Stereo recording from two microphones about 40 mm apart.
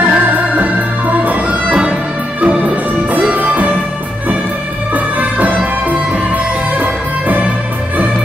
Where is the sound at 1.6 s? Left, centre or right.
Right.